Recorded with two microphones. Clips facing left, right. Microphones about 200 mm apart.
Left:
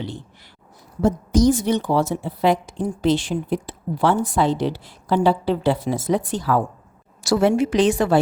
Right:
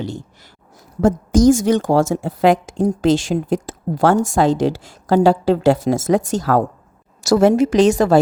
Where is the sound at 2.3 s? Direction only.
90° right.